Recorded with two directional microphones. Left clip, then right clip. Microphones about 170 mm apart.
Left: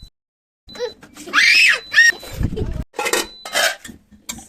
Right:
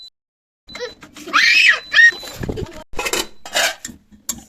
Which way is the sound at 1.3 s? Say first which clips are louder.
Even; 75° left (ahead or behind).